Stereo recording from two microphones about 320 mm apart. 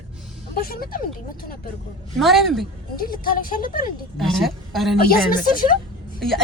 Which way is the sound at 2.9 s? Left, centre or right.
Left.